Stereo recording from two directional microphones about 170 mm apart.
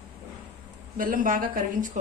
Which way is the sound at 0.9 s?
55° right (ahead or behind).